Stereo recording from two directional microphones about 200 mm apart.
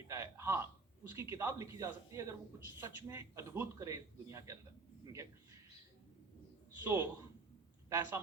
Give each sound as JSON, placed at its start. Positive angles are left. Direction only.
{"t": 0.1, "sound": "a sound", "side_deg": -15}
{"t": 1.1, "sound": "a man's voice", "side_deg": -15}
{"t": 6.8, "sound": "a man's voice", "side_deg": -10}